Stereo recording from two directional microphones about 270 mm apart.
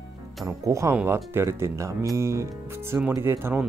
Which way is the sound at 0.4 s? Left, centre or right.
Centre.